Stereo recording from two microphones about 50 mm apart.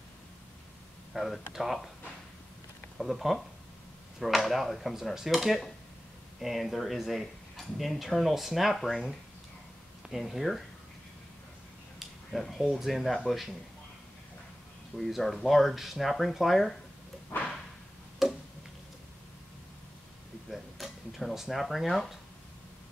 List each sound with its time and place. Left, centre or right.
1.1 s speech: centre
3.0 s speech: centre
12.3 s speech: centre
15.0 s speech: centre
17.3 s whip: left
18.2 s a sound: centre
20.4 s a sound: centre